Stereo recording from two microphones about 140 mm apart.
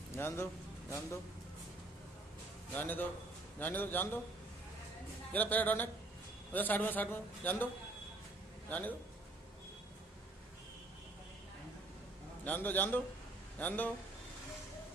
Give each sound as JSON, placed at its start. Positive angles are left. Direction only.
{"t": 0.1, "sound": "a man's voice", "side_deg": 20}
{"t": 2.7, "sound": "a man's voice", "side_deg": 15}
{"t": 5.3, "sound": "a man's voice", "side_deg": 10}
{"t": 8.6, "sound": "speech", "side_deg": 10}
{"t": 12.4, "sound": "a man's voice", "side_deg": 15}